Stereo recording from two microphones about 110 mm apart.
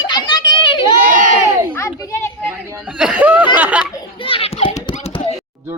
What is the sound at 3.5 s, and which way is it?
Laughter, 10° right (ahead or behind).